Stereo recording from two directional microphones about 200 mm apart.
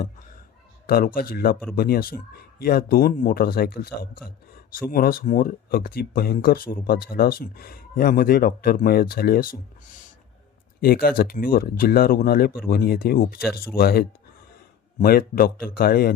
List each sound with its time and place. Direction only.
0.9 s speech: 45° left (ahead or behind)
10.8 s speech: 50° left (ahead or behind)